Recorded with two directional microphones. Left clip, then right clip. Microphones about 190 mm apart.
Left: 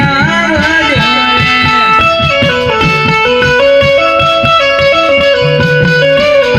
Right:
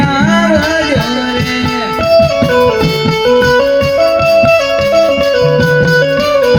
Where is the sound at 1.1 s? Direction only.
20° right (ahead or behind).